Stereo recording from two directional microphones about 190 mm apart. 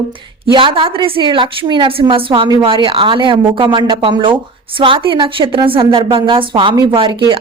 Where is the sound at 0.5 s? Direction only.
25° right (ahead or behind).